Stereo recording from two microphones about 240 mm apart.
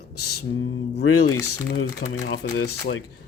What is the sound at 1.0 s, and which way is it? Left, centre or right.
Speech, left.